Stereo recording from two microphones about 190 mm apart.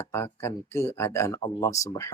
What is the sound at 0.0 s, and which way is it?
Speech, 15° left (ahead or behind).